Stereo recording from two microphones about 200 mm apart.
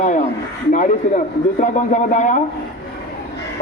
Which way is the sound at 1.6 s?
35° left (ahead or behind).